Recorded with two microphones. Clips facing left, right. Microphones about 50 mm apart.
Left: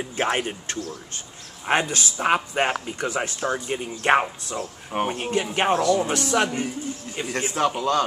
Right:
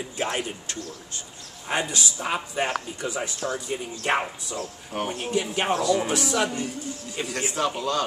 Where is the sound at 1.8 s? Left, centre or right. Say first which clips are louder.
Left 5 dB; left.